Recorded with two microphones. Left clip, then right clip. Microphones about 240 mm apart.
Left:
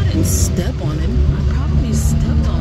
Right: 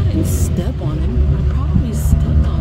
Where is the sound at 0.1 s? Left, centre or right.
Centre.